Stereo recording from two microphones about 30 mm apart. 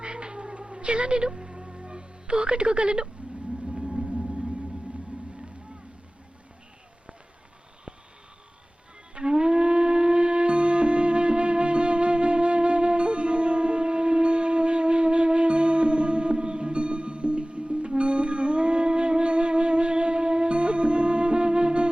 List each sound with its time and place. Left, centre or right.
0.0 s cat: right
1.3 s music: right
3.2 s a sound: right
3.7 s gong: right
9.1 s music: right